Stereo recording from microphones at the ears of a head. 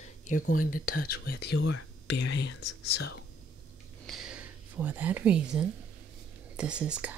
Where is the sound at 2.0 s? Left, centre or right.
Left.